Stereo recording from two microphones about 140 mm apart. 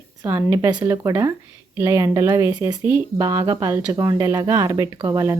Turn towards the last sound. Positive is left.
turn(degrees=-25)  # may be behind; listen again after turning